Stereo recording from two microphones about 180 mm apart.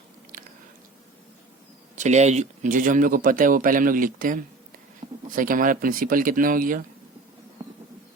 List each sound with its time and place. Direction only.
2.0 s a man's voice: 40° right (ahead or behind)